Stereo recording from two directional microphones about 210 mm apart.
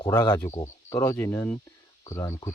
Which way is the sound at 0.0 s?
20° left (ahead or behind).